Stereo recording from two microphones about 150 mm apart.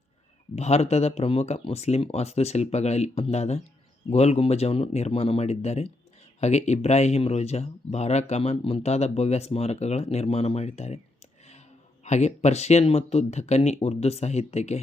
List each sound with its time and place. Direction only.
0.5 s speech: 45° left (ahead or behind)
12.0 s speech: 50° left (ahead or behind)